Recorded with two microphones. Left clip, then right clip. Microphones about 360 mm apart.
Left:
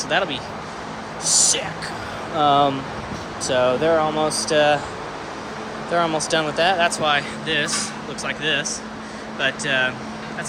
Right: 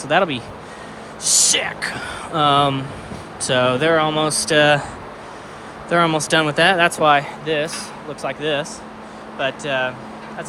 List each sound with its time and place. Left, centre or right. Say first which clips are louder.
0.1 s speech: right 5 dB; centre
5.9 s speech: right 4 dB; centre